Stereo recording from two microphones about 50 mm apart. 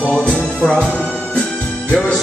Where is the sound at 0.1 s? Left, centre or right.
Left.